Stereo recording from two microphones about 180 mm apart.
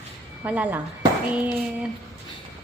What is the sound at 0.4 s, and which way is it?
Speech, 10° right (ahead or behind).